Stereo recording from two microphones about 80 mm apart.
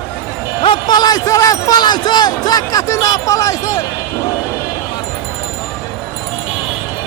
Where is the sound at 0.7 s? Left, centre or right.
Left.